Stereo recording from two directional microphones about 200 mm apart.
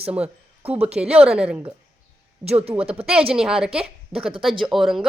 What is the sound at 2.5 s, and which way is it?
Speech, 30° right (ahead or behind).